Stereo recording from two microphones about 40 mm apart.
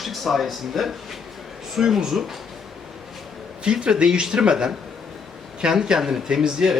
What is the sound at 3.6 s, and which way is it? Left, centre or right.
A man's voice, right.